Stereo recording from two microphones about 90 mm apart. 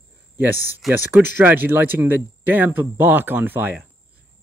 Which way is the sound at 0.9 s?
25° right (ahead or behind).